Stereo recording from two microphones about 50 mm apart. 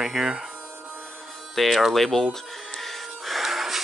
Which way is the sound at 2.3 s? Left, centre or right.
Centre.